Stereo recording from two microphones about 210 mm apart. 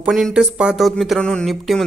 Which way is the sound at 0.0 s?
5° right (ahead or behind).